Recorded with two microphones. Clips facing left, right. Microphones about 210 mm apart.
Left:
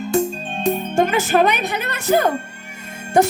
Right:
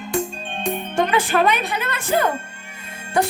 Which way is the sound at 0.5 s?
40° left (ahead or behind).